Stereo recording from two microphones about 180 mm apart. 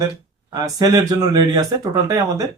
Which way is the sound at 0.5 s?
20° right (ahead or behind).